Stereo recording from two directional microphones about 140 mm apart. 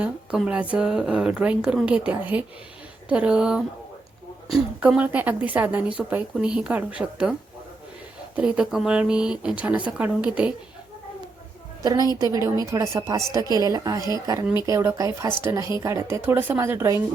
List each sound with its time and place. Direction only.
0.0 s a woman's voice: 10° right (ahead or behind)
8.4 s a woman's voice: 10° right (ahead or behind)
11.8 s a woman's voice: 30° right (ahead or behind)